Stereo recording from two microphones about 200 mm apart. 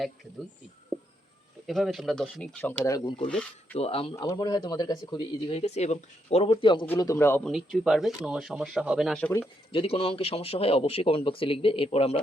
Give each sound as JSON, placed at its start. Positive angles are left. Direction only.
{"t": 1.6, "sound": "speech", "side_deg": 0}
{"t": 3.2, "sound": "speech", "side_deg": 5}
{"t": 3.8, "sound": "speech", "side_deg": 30}
{"t": 6.8, "sound": "speech", "side_deg": 10}
{"t": 7.5, "sound": "speech", "side_deg": 0}
{"t": 9.7, "sound": "speech", "side_deg": 30}